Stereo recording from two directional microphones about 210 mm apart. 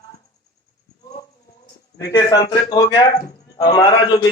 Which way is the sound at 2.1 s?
20° left (ahead or behind).